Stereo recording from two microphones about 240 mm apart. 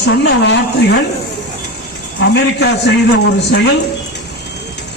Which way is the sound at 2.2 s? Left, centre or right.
Left.